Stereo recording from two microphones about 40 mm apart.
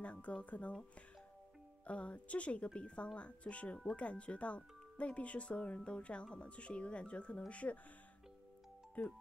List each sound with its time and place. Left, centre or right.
0.0 s speech: left
1.9 s speech: left